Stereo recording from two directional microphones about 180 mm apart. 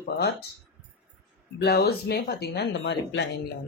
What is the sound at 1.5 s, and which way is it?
Speech, 65° left (ahead or behind).